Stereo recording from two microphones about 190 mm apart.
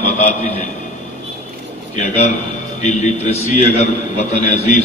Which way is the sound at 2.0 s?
35° left (ahead or behind).